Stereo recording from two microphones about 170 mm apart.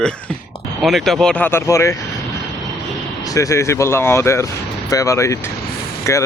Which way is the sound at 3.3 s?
20° left (ahead or behind).